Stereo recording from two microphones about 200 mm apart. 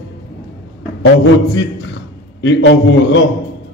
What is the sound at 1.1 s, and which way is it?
A man's voice, 60° left (ahead or behind).